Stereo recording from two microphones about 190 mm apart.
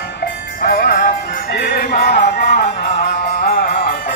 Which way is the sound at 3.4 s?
50° left (ahead or behind).